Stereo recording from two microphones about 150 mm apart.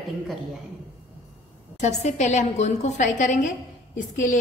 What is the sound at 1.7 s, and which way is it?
A woman's voice, 50° left (ahead or behind).